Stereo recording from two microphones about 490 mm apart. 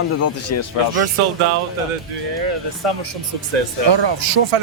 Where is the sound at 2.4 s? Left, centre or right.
Right.